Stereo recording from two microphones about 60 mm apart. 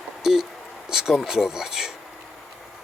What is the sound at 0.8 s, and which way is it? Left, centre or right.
Speech, centre.